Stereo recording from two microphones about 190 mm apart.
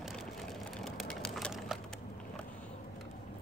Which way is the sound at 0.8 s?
5° left (ahead or behind).